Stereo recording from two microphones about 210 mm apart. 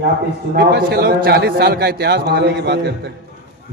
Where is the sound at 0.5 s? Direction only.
50° right (ahead or behind).